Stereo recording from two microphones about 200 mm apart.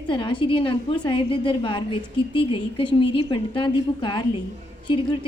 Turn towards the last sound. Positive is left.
turn(degrees=25)  # may be behind; listen again after turning